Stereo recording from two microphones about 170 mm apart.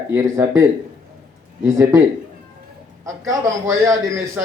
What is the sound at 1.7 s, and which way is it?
Speech, 20° right (ahead or behind).